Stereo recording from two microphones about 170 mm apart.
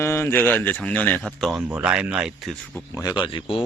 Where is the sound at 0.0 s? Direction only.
15° left (ahead or behind).